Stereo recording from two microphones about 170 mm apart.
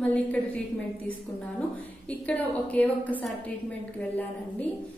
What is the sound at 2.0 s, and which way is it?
A woman's voice, 10° left (ahead or behind).